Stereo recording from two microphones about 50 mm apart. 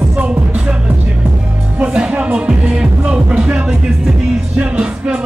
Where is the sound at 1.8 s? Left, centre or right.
Right.